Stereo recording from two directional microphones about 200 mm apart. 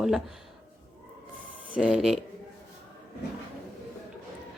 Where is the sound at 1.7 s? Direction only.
5° right (ahead or behind).